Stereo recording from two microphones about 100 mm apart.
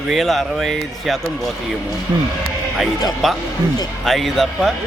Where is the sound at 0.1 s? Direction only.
Centre (ahead or behind).